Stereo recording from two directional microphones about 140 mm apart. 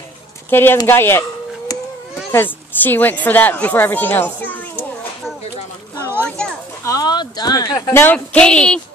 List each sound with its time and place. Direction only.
0.5 s a woman's voice: 15° left (ahead or behind)
2.3 s a woman's voice: 15° left (ahead or behind)
6.2 s children playing: 5° left (ahead or behind)
6.8 s a sound: 25° left (ahead or behind)
7.9 s a woman's voice: 15° left (ahead or behind)